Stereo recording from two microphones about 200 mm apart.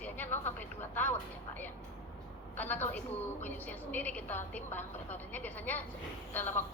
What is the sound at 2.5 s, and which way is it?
A woman's voice, 10° left (ahead or behind).